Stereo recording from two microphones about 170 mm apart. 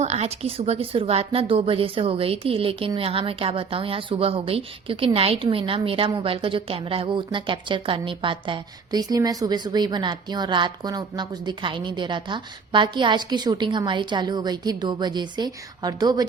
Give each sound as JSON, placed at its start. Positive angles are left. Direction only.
{"t": 0.0, "sound": "a woman's voice", "side_deg": -40}